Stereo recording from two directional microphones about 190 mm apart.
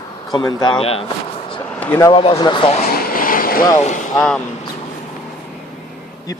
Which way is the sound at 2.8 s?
50° left (ahead or behind).